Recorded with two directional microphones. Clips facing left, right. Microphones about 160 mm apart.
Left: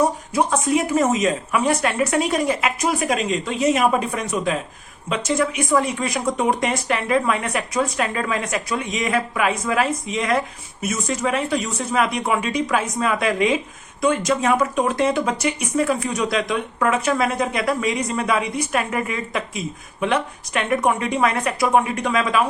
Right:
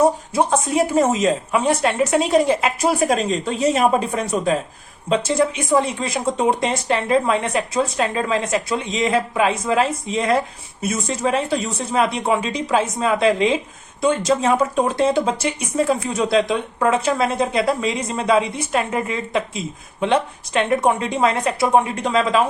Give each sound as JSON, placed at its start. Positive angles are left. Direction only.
{"t": 0.3, "sound": "a woman's voice", "side_deg": -30}